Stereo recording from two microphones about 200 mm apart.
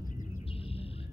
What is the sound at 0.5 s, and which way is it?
Bird, 30° left (ahead or behind).